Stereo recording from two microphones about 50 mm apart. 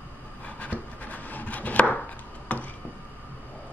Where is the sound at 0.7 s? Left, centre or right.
Right.